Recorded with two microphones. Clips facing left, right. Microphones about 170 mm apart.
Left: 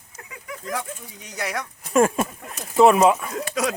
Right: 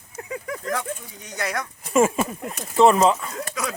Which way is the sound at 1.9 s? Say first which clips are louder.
Even; centre (ahead or behind).